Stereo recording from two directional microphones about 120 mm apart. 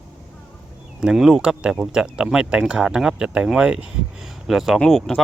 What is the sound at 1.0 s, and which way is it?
Speech, 5° right (ahead or behind).